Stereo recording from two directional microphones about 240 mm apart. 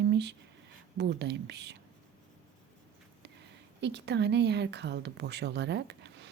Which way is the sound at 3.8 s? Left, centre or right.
Right.